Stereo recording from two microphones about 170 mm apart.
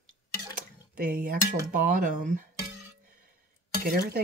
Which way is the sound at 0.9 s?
55° right (ahead or behind).